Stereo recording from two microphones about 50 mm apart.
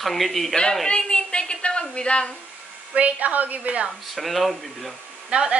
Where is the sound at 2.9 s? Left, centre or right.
Right.